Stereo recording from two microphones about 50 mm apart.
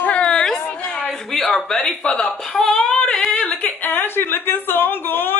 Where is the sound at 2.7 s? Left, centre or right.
Centre.